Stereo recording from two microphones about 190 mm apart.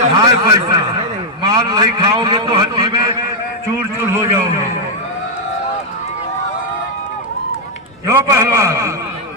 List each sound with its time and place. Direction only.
0.2 s a man's voice: 20° right (ahead or behind)
3.8 s a sound: 15° right (ahead or behind)
8.0 s a man's voice: 15° right (ahead or behind)